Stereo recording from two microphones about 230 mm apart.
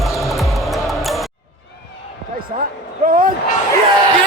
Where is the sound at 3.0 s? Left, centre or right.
Right.